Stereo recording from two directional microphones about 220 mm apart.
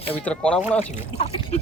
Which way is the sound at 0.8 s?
30° left (ahead or behind).